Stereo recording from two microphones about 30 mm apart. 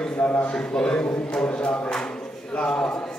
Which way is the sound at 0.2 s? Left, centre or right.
Left.